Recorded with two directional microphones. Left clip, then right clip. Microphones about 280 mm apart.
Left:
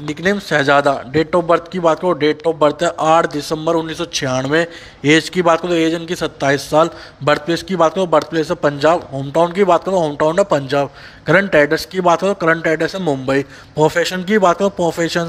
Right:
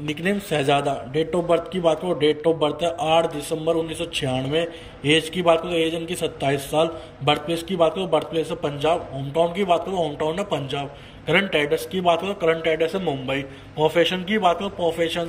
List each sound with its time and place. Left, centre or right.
0.2 s a man's voice: centre